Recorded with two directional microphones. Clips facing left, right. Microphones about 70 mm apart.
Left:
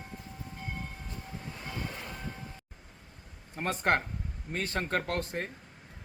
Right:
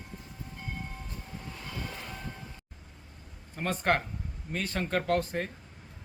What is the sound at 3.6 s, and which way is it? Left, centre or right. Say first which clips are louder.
Speech: even; left.